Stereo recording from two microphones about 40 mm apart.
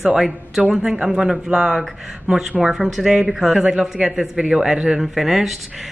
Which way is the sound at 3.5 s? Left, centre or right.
Centre.